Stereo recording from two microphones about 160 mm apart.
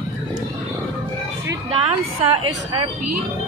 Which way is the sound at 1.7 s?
35° right (ahead or behind).